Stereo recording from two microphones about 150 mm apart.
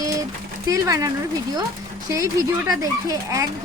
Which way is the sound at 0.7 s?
25° right (ahead or behind).